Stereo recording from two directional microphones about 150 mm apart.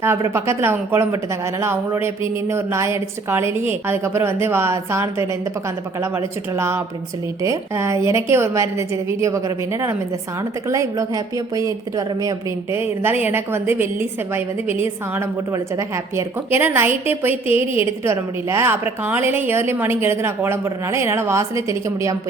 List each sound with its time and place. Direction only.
0.0 s a woman's voice: 15° right (ahead or behind)
17.6 s a woman's voice: 40° left (ahead or behind)
18.0 s speech: 20° right (ahead or behind)